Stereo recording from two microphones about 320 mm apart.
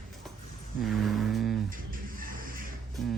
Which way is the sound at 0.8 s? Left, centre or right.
Centre.